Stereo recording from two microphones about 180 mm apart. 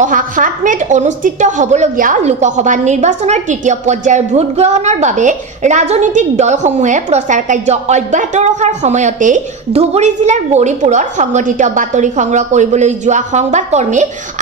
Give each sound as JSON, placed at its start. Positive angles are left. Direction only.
{"t": 0.0, "sound": "a woman's voice", "side_deg": -45}